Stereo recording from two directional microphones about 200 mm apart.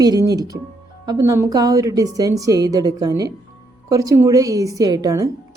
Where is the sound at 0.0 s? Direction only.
20° right (ahead or behind).